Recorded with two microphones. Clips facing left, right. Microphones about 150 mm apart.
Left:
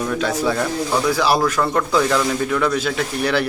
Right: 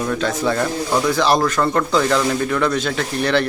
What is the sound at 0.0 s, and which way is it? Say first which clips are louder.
Speech: even; 5° left (ahead or behind).